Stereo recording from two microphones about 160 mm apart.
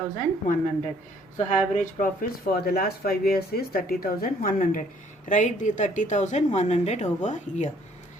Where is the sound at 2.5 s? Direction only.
70° left (ahead or behind).